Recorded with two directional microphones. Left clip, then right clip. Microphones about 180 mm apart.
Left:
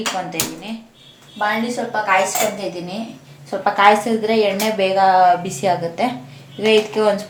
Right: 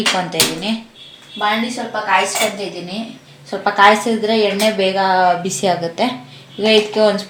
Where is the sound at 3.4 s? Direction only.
35° right (ahead or behind).